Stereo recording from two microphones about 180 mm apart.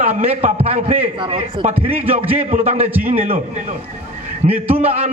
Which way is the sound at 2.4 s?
40° right (ahead or behind).